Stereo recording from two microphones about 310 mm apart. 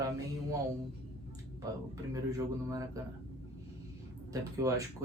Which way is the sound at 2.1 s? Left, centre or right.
Centre.